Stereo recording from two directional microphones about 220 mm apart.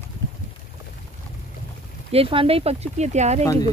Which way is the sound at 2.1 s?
25° right (ahead or behind).